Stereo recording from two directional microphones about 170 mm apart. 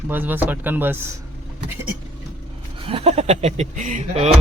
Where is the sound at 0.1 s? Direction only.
10° right (ahead or behind).